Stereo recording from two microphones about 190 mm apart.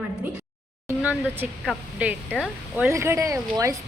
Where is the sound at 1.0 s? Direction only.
5° right (ahead or behind).